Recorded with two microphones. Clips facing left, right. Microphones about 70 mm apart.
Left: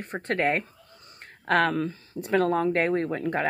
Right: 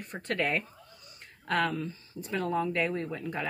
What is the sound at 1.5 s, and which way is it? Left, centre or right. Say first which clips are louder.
Speech: left 6 dB; left.